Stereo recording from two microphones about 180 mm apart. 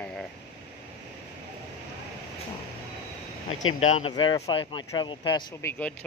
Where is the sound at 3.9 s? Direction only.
40° left (ahead or behind).